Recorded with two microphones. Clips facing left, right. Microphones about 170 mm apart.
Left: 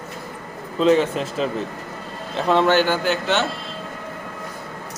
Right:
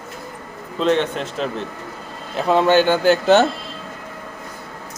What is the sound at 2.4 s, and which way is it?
Speech, 10° right (ahead or behind).